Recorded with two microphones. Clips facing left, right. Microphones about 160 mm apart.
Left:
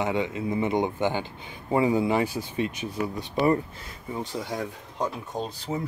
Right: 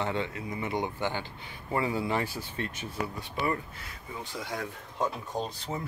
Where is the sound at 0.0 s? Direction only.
15° left (ahead or behind).